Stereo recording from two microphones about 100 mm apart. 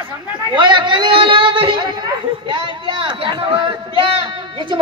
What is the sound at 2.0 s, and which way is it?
Speech, 50° right (ahead or behind).